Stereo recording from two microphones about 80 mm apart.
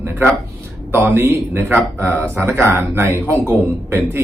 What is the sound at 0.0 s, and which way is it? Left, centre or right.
A man's voice, right.